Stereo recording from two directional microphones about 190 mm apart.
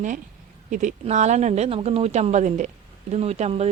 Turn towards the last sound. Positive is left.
turn(degrees=-35)  # may be behind; listen again after turning